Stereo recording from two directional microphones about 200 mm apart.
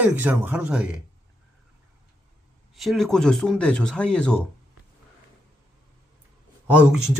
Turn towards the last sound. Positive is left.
turn(degrees=-5)  # may be behind; listen again after turning